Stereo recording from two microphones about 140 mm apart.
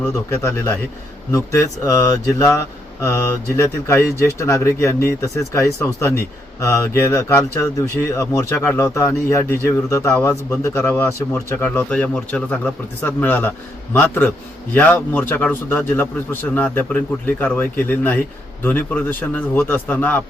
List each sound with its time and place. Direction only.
0.1 s speech: 20° left (ahead or behind)
10.2 s speech: 10° left (ahead or behind)